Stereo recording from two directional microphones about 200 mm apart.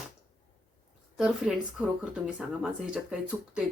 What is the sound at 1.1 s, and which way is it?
Speech, 5° right (ahead or behind).